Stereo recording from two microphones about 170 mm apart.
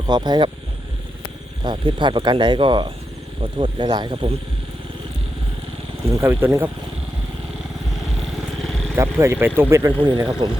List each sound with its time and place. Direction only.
0.1 s speech: 25° right (ahead or behind)
1.6 s speech: 30° right (ahead or behind)
6.1 s speech: 15° right (ahead or behind)
8.6 s vehicle: 5° left (ahead or behind)
9.0 s speech: 15° right (ahead or behind)
10.0 s speech: 25° right (ahead or behind)